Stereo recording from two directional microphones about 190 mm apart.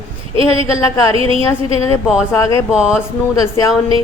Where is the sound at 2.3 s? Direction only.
15° left (ahead or behind).